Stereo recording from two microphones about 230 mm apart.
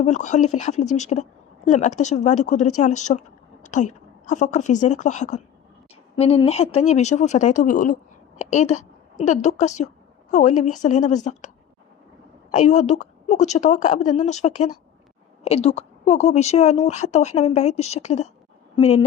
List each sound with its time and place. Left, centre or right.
0.0 s a woman's voice: left